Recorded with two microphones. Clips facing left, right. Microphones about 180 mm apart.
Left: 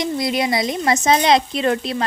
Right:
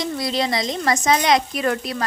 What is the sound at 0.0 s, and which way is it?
A woman's voice, 20° left (ahead or behind).